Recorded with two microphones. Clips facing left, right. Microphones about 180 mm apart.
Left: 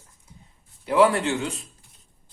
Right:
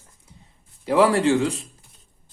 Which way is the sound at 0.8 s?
35° right (ahead or behind).